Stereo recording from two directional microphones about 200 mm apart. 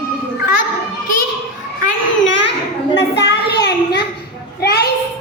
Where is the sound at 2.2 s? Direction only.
65° left (ahead or behind).